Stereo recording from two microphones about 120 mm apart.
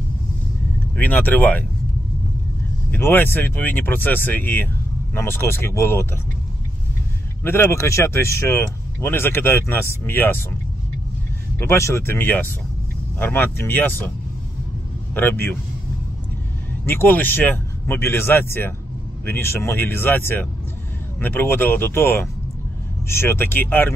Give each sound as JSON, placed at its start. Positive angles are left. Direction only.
{"t": 0.9, "sound": "speech", "side_deg": 15}
{"t": 2.9, "sound": "speech", "side_deg": 15}
{"t": 7.4, "sound": "speech", "side_deg": 25}
{"t": 11.6, "sound": "speech", "side_deg": 20}
{"t": 16.8, "sound": "speech", "side_deg": 15}